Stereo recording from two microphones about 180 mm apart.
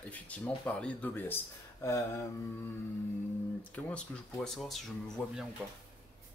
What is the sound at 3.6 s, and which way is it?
Speech, 5° left (ahead or behind).